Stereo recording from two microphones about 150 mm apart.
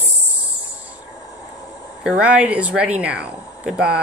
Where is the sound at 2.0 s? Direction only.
10° right (ahead or behind).